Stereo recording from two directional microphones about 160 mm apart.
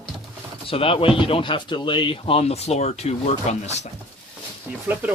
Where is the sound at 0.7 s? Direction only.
35° left (ahead or behind).